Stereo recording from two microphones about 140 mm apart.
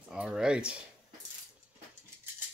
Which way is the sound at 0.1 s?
5° right (ahead or behind).